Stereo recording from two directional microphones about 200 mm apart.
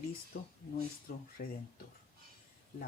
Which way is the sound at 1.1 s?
45° left (ahead or behind).